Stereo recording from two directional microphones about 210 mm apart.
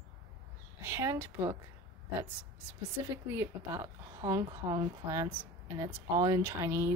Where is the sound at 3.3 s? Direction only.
10° right (ahead or behind).